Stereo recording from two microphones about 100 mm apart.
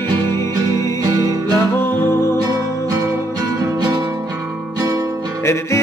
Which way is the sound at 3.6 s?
35° right (ahead or behind).